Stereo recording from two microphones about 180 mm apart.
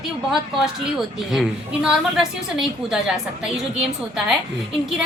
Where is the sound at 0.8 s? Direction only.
5° right (ahead or behind).